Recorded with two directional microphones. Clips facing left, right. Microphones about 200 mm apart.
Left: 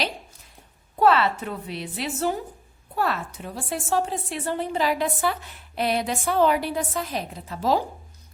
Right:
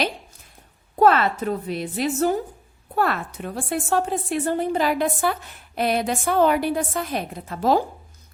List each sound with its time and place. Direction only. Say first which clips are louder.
0.9 s a woman's voice: right 2 dB; 45° right (ahead or behind)
2.9 s a woman's voice: right 3 dB; 55° right (ahead or behind)